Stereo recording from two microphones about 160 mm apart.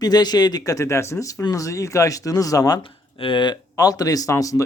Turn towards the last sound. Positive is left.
turn(degrees=20)  # may be behind; listen again after turning